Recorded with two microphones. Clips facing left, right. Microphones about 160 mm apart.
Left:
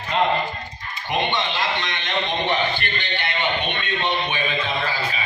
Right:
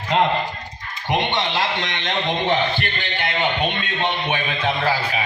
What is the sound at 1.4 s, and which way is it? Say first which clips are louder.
A man's voice: right 2 dB; 90° right.